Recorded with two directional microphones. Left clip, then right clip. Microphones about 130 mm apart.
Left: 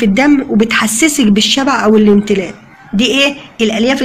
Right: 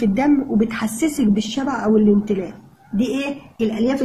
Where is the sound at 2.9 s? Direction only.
15° left (ahead or behind).